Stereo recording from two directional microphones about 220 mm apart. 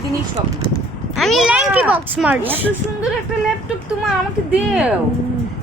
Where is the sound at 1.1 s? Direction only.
Centre (ahead or behind).